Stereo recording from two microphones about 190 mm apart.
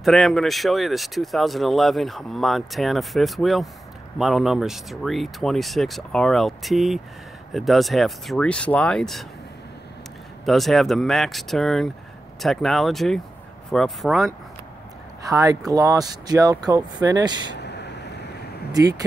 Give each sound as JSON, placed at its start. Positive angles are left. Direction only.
{"t": 0.0, "sound": "speech", "side_deg": 0}
{"t": 10.4, "sound": "speech", "side_deg": 0}
{"t": 15.2, "sound": "speech", "side_deg": -20}
{"t": 17.6, "sound": "vehicle", "side_deg": 65}
{"t": 18.7, "sound": "speech", "side_deg": -20}